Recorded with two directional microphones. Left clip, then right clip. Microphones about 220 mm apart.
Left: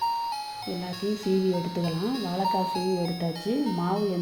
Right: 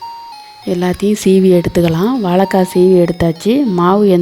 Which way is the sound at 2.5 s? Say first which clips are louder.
Right 17 dB; 55° right (ahead or behind).